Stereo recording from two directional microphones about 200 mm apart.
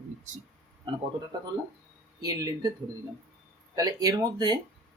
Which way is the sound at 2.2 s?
20° right (ahead or behind).